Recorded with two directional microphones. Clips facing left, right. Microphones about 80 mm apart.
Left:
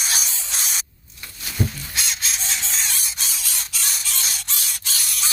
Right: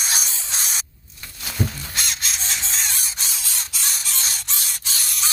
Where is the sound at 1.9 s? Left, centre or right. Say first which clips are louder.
Even; right.